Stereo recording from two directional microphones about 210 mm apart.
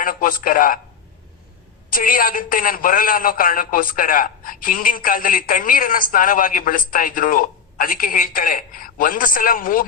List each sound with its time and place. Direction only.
0.0 s a man's voice: 40° left (ahead or behind)
1.9 s a man's voice: 40° left (ahead or behind)